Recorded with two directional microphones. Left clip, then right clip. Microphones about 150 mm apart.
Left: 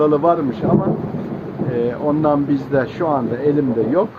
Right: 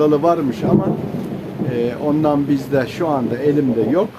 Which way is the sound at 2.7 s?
35° right (ahead or behind).